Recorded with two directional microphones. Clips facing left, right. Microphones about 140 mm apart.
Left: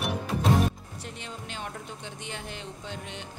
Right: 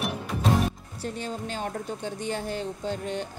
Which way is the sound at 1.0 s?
40° right (ahead or behind).